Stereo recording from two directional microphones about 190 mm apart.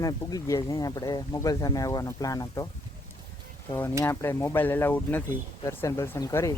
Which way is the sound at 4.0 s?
15° left (ahead or behind).